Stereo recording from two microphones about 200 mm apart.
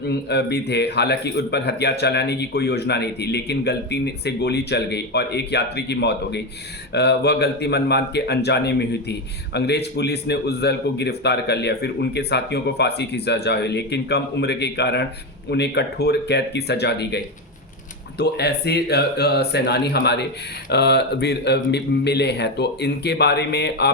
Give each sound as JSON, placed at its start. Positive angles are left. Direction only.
{"t": 0.0, "sound": "a man's voice", "side_deg": 55}